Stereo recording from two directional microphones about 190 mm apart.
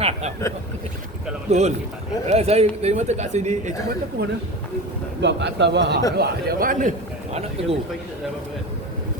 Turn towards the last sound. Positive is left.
turn(degrees=-35)  # may be behind; listen again after turning